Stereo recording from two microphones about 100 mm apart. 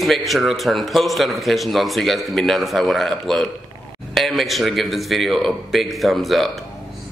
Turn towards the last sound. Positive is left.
turn(degrees=0)  # may be behind; listen again after turning